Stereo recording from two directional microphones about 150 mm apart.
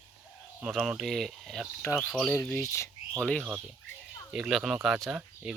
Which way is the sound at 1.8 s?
15° left (ahead or behind).